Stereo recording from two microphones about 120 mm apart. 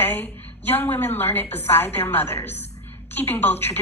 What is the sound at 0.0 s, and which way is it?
A woman's voice, 15° left (ahead or behind).